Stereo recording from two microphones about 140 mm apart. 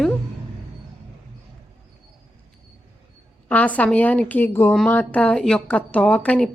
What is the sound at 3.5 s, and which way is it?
A woman's voice, 10° left (ahead or behind).